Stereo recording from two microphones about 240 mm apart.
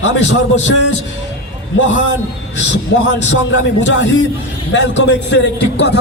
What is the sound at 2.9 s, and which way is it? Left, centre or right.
Speech, left.